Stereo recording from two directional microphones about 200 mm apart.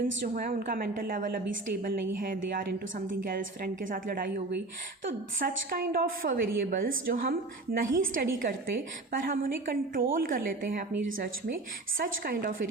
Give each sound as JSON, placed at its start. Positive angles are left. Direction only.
{"t": 0.3, "sound": "a woman's voice", "side_deg": -45}
{"t": 3.8, "sound": "a woman's voice", "side_deg": -45}
{"t": 11.9, "sound": "a woman's voice", "side_deg": -45}